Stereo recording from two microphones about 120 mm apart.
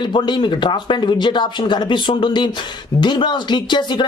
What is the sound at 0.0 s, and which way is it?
Speech, 40° left (ahead or behind).